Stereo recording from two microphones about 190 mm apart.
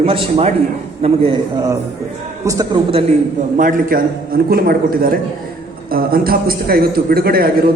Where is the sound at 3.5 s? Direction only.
45° right (ahead or behind).